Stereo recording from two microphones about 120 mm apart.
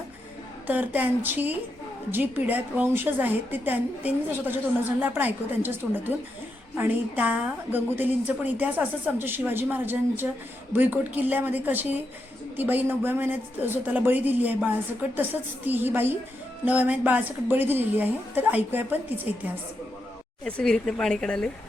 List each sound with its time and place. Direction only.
0.7 s a woman's voice: 15° right (ahead or behind)
20.4 s speech: 5° left (ahead or behind)